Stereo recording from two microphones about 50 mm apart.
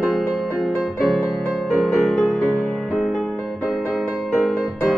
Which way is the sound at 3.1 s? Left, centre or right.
Centre.